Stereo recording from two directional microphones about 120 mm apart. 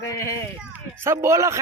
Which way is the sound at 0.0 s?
25° left (ahead or behind).